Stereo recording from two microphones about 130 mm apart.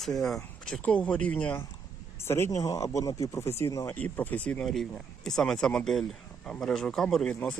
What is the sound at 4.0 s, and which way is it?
Speech, 10° left (ahead or behind).